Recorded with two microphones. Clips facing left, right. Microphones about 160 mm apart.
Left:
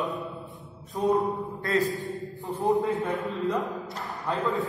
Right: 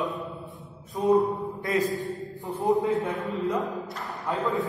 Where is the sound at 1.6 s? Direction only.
15° right (ahead or behind).